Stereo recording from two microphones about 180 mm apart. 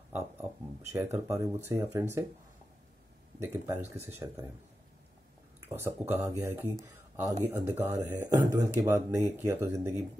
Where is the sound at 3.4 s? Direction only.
15° right (ahead or behind).